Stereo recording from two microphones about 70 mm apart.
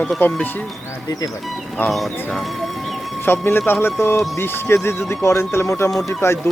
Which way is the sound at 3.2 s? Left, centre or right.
Left.